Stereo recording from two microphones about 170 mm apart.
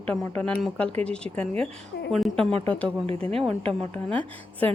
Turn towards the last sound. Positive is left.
turn(degrees=10)  # may be behind; listen again after turning